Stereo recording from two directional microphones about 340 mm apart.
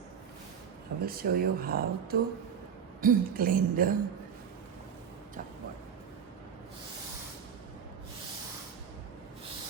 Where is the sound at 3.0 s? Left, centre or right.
Right.